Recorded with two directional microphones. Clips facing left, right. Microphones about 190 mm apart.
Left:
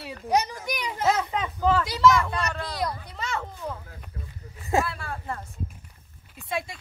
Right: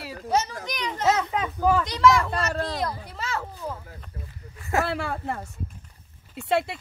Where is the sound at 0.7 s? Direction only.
10° left (ahead or behind).